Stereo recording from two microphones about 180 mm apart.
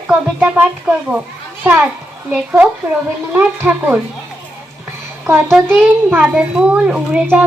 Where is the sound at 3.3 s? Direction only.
10° right (ahead or behind).